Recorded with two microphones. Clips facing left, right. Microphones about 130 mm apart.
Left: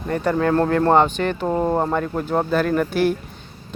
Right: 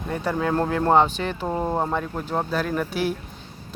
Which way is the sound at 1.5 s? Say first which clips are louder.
Left 4 dB; 10° left (ahead or behind).